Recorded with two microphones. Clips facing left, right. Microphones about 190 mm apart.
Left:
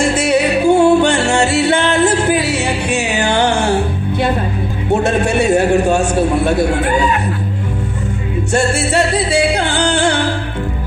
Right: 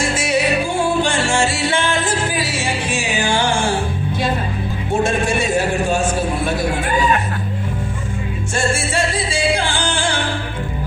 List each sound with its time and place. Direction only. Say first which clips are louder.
0.2 s music: left 4 dB; 60° left (ahead or behind)
5.0 s a sound: left 4 dB; 65° left (ahead or behind)
8.5 s music: left 5 dB; 65° left (ahead or behind)